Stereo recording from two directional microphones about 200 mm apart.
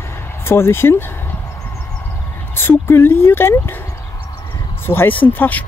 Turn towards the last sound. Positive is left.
turn(degrees=10)  # may be behind; listen again after turning